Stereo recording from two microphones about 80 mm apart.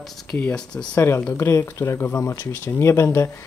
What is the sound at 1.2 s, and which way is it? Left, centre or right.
Speech, left.